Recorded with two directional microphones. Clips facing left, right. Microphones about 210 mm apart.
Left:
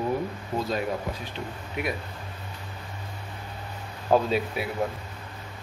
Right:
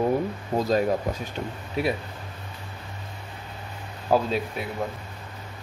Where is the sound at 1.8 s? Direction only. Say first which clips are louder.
Right 5 dB; 30° right (ahead or behind).